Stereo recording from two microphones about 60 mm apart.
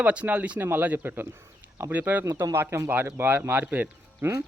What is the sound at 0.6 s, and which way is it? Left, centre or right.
A man's voice, right.